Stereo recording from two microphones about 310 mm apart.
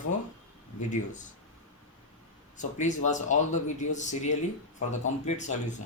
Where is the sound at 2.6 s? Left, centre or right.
Left.